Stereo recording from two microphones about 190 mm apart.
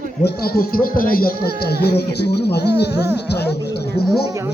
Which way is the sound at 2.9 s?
15° right (ahead or behind).